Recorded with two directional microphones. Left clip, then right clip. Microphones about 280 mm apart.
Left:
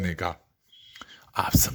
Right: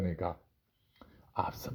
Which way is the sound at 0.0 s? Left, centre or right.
Centre.